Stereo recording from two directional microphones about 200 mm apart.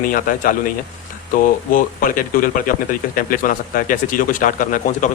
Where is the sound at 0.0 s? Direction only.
45° left (ahead or behind).